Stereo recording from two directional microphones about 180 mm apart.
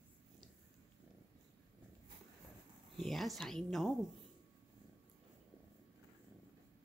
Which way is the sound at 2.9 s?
Centre (ahead or behind).